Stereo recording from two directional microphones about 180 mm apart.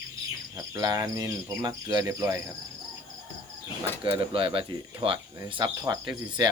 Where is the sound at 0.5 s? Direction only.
20° right (ahead or behind).